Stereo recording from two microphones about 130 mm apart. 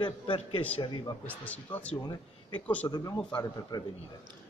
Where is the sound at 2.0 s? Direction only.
35° left (ahead or behind).